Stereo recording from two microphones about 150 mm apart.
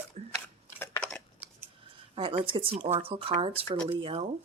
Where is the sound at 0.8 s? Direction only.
10° left (ahead or behind).